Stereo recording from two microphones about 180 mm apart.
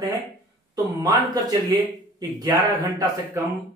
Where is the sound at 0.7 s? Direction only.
20° right (ahead or behind).